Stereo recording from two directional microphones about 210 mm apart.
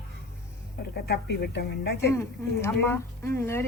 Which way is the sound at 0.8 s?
50° left (ahead or behind).